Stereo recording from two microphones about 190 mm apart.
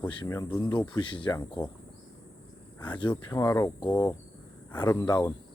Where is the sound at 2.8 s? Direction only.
25° left (ahead or behind).